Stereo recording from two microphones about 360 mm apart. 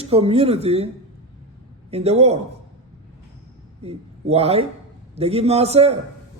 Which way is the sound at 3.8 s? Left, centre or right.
Centre.